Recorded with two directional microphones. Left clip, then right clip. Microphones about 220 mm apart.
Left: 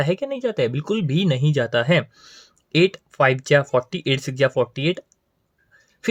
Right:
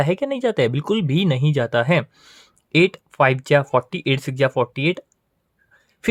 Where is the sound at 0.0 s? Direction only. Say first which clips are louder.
Right 2 dB; 20° right (ahead or behind).